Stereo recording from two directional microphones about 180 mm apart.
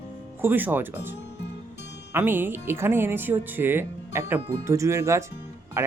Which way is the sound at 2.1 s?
10° right (ahead or behind).